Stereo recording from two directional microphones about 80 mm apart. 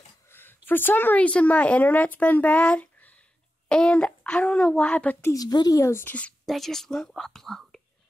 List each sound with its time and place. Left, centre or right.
0.3 s a sound: left
0.7 s a child's voice: left
5.3 s a woman's voice: left
6.4 s speech: centre